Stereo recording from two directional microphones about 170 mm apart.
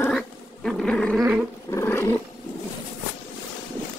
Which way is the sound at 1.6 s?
15° left (ahead or behind).